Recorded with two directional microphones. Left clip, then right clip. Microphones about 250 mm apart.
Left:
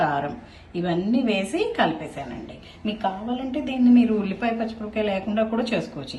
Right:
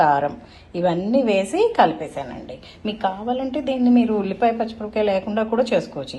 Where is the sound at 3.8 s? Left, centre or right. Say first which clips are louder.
Left 1 dB; right.